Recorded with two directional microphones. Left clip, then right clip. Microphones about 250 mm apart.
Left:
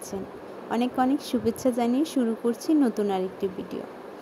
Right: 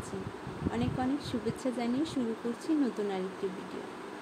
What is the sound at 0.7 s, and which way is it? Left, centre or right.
Speech, left.